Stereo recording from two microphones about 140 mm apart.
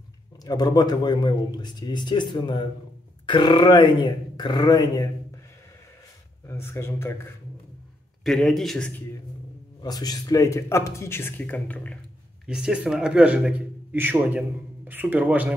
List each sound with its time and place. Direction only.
0.4 s a man's voice: 30° left (ahead or behind)
6.4 s speech: 20° left (ahead or behind)
8.2 s speech: centre (ahead or behind)
9.8 s speech: 30° left (ahead or behind); by 12.0 s 10° left (ahead or behind)
12.4 s a man's voice: 5° right (ahead or behind)